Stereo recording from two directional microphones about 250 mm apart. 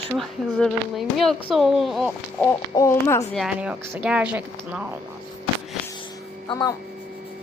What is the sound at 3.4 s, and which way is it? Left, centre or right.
Speech, centre.